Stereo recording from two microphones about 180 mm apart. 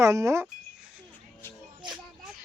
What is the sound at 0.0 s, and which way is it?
Speech, 15° right (ahead or behind).